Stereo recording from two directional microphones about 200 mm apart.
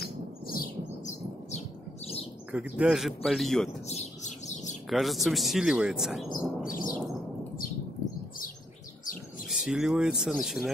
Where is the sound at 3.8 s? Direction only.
35° left (ahead or behind).